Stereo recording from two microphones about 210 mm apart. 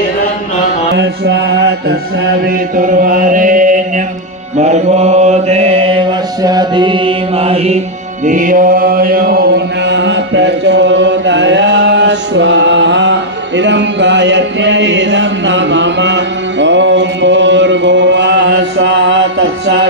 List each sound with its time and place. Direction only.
0.9 s music: 55° right (ahead or behind)
2.4 s chant: 40° right (ahead or behind)
4.6 s mantra: 30° right (ahead or behind)
6.4 s music: 20° right (ahead or behind)
8.3 s chant: 40° right (ahead or behind); by 19.9 s 55° right (ahead or behind)